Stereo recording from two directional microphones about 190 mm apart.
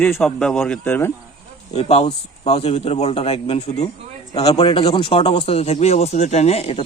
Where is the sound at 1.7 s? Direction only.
30° left (ahead or behind).